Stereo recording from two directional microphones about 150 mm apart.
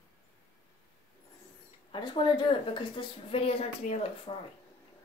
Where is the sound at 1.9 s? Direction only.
30° left (ahead or behind).